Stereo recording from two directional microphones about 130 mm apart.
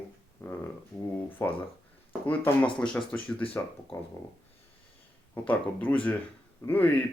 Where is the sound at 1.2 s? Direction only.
15° left (ahead or behind).